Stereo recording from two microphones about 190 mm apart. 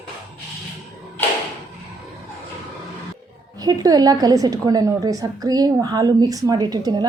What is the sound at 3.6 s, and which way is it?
A woman's voice, 20° right (ahead or behind).